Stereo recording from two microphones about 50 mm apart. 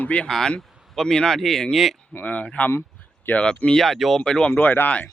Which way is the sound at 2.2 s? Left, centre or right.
Left.